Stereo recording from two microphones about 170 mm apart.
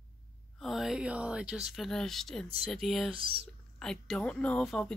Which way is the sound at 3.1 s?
30° right (ahead or behind).